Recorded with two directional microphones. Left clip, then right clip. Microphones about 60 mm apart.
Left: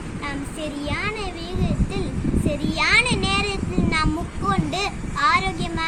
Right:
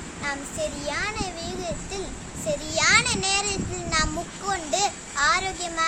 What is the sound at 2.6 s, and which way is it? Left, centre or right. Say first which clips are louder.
A child's voice: left 2 dB; right.